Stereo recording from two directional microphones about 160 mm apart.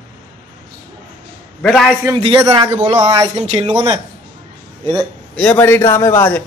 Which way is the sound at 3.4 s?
35° right (ahead or behind).